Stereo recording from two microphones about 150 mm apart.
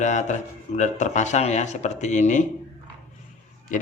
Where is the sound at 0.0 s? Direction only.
55° left (ahead or behind).